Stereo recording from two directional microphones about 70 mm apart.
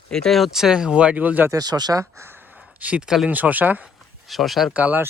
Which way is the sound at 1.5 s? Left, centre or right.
Right.